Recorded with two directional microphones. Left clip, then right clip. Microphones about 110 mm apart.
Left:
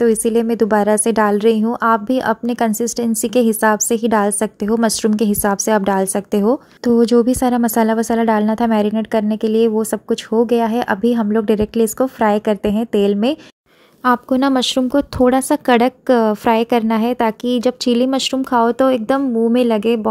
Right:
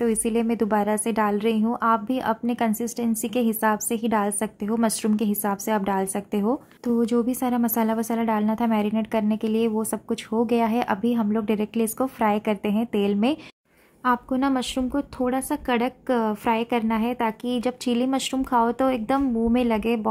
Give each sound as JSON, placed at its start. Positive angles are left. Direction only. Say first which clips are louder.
{"t": 0.0, "sound": "a woman's voice", "louder": "left 9 dB", "side_deg": 30}
{"t": 14.0, "sound": "a woman's voice", "louder": "left 8 dB", "side_deg": 50}